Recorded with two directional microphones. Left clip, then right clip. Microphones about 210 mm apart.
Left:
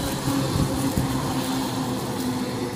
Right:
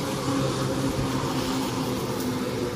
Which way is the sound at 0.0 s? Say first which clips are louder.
Left 1 dB; 40° left (ahead or behind).